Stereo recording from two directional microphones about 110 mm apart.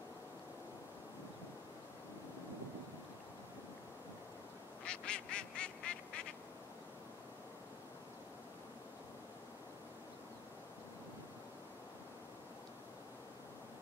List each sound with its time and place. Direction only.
4.8 s duck: 10° left (ahead or behind)